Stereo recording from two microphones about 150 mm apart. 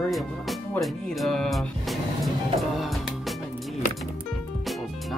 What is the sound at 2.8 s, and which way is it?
Music, centre (ahead or behind).